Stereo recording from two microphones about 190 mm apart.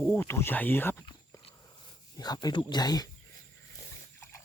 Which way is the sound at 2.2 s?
20° left (ahead or behind).